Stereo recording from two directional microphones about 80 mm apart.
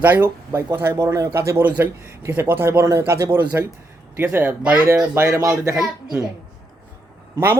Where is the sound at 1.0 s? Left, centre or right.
Right.